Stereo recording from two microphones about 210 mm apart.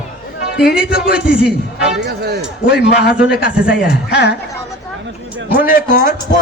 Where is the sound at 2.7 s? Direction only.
50° left (ahead or behind).